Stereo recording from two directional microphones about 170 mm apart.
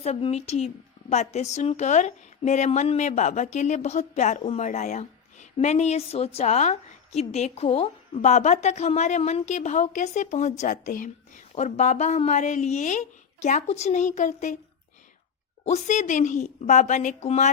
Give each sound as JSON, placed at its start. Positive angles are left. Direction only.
{"t": 0.0, "sound": "a woman's voice", "side_deg": 40}
{"t": 15.6, "sound": "a woman's voice", "side_deg": 45}